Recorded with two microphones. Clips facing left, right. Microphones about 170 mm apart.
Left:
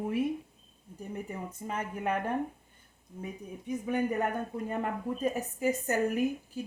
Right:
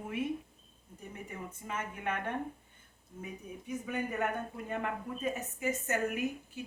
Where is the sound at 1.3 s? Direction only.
35° left (ahead or behind).